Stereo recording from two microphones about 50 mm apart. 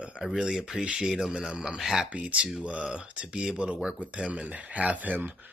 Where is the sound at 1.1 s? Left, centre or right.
Centre.